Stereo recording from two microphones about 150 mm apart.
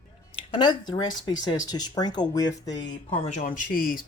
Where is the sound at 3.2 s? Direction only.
55° left (ahead or behind); by 4.0 s 70° left (ahead or behind).